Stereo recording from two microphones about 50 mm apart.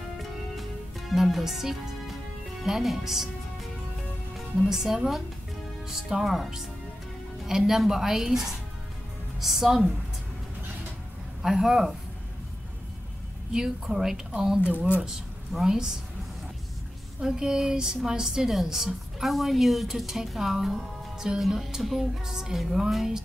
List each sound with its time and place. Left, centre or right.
1.1 s speech: centre
2.6 s music: centre
4.6 s music: centre
11.4 s music: centre
13.5 s music: centre
14.7 s speech: right
15.5 s music: centre
17.2 s music: centre
19.1 s a woman's voice: centre
21.4 s music: centre